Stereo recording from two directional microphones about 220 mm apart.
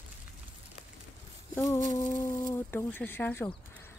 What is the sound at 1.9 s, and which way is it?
Speech, 10° left (ahead or behind).